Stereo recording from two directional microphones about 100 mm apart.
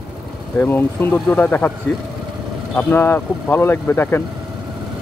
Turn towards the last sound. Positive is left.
turn(degrees=20)  # may be behind; listen again after turning